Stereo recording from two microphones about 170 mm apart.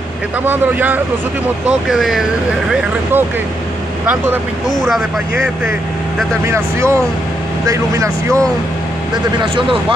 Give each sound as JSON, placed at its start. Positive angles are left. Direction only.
{"t": 0.5, "sound": "speech", "side_deg": -10}
{"t": 4.6, "sound": "speech", "side_deg": 0}
{"t": 6.4, "sound": "speech", "side_deg": -15}
{"t": 9.4, "sound": "speech", "side_deg": -30}